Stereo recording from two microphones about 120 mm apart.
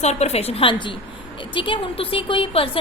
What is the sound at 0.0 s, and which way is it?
A woman's voice, 65° left (ahead or behind).